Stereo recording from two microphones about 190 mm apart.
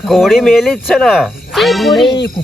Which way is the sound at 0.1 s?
Centre (ahead or behind).